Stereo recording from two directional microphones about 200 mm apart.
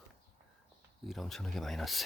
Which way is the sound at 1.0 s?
Centre (ahead or behind).